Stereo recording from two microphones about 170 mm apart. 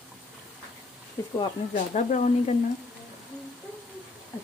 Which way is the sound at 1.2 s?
10° left (ahead or behind).